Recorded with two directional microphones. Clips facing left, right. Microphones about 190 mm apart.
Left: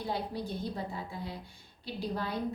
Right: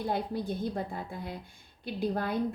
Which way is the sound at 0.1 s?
55° right (ahead or behind).